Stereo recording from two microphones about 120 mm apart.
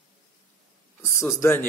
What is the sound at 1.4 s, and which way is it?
Speech, 20° left (ahead or behind).